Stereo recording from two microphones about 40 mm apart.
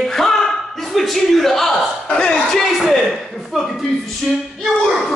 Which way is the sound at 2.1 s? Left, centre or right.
Centre.